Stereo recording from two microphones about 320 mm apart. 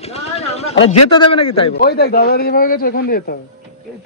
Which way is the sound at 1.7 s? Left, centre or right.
Left.